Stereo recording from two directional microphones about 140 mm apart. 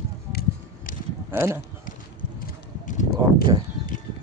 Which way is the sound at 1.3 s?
15° right (ahead or behind).